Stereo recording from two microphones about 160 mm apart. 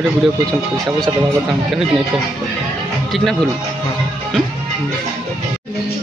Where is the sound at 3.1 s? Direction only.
Centre (ahead or behind).